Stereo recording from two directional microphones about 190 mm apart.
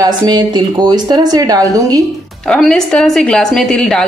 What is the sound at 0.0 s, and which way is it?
A woman's voice, 20° right (ahead or behind).